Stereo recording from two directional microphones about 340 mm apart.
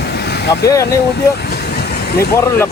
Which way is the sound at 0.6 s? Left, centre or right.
Centre.